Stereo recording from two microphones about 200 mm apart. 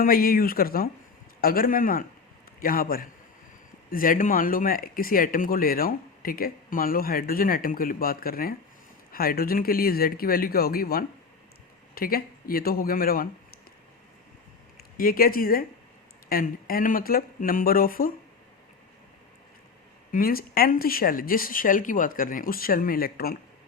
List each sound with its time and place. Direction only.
0.0 s speech: 45° left (ahead or behind)
14.9 s speech: 45° left (ahead or behind)
20.1 s speech: 45° left (ahead or behind)